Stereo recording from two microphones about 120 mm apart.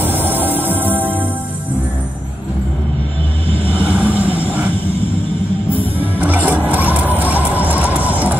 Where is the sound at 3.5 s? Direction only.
50° right (ahead or behind).